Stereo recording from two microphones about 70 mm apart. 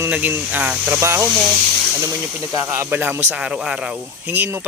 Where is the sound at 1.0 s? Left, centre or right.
Right.